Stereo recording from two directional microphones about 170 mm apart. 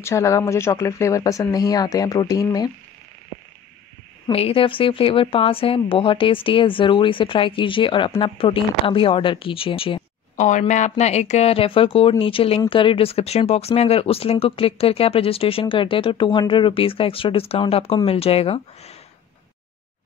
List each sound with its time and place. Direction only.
0.0 s speech: 15° left (ahead or behind)
4.3 s speech: 35° left (ahead or behind)
10.3 s speech: 45° left (ahead or behind)